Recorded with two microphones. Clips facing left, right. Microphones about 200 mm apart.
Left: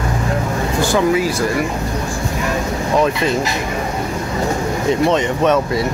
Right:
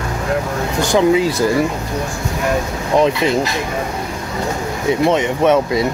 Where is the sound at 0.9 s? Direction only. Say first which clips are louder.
Right 4 dB; 20° right (ahead or behind).